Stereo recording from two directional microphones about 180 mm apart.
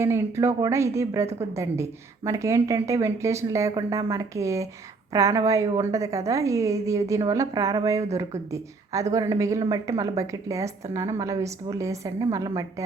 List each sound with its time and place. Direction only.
0.0 s a woman's voice: 15° right (ahead or behind)